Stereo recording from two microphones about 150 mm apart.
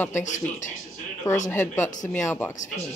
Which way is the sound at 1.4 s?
15° left (ahead or behind).